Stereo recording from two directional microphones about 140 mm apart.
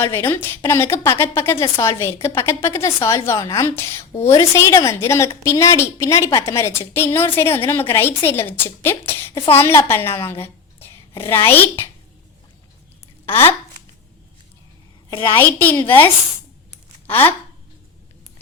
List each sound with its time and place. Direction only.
0.0 s a woman's voice: 15° left (ahead or behind)
13.2 s a woman's voice: 15° left (ahead or behind)
15.4 s a woman's voice: 15° left (ahead or behind)
17.1 s a woman's voice: 15° left (ahead or behind)